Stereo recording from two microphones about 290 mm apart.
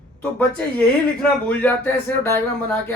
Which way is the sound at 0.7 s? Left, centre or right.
Centre.